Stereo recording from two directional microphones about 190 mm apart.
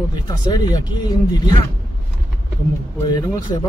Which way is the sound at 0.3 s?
20° left (ahead or behind).